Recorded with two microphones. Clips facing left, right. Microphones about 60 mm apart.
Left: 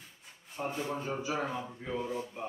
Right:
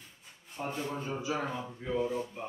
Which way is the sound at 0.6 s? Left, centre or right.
Centre.